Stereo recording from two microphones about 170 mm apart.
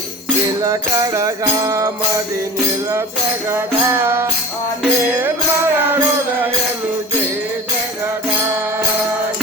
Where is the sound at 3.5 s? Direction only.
15° right (ahead or behind).